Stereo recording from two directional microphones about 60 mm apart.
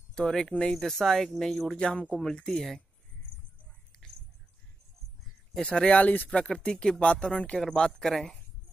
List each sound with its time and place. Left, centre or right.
0.1 s speech: centre
5.6 s speech: centre
6.6 s speech: centre